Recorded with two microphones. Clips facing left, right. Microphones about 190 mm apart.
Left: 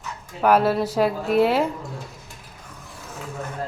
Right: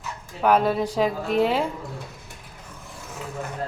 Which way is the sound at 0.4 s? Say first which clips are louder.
Left 2 dB; 5° left (ahead or behind).